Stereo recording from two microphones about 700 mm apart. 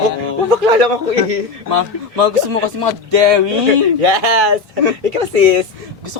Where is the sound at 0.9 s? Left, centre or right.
Right.